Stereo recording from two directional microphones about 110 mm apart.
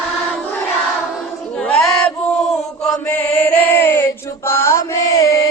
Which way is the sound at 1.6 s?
5° left (ahead or behind).